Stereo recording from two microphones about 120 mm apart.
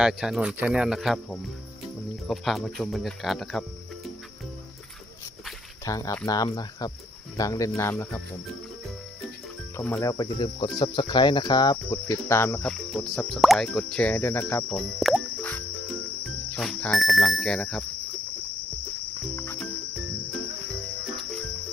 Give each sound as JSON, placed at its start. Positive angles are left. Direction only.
{"t": 0.0, "sound": "speech", "side_deg": -5}
{"t": 5.8, "sound": "speech", "side_deg": 30}
{"t": 9.9, "sound": "speech", "side_deg": 30}
{"t": 12.6, "sound": "speech", "side_deg": 0}
{"t": 14.7, "sound": "speech", "side_deg": 0}
{"t": 15.4, "sound": "music", "side_deg": 15}
{"t": 16.6, "sound": "speech", "side_deg": 5}